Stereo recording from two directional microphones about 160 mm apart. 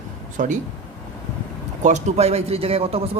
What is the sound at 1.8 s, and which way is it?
A man's voice, 45° right (ahead or behind).